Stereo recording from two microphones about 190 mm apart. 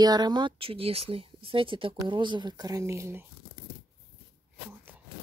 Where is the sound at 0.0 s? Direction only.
20° right (ahead or behind).